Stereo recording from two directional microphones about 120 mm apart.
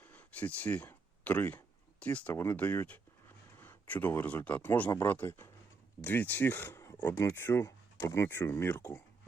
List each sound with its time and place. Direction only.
0.0 s speech: 15° left (ahead or behind)